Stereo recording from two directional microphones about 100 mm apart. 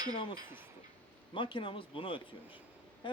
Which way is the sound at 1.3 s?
55° left (ahead or behind).